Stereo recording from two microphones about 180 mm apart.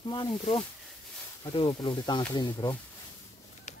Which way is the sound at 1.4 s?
30° left (ahead or behind).